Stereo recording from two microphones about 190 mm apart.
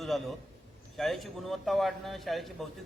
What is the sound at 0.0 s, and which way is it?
A man's voice, centre (ahead or behind).